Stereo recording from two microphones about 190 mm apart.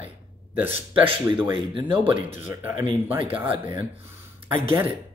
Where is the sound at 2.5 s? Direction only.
10° right (ahead or behind).